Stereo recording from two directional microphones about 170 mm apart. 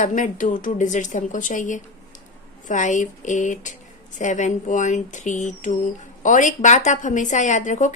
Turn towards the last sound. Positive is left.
turn(degrees=45)  # may be behind; listen again after turning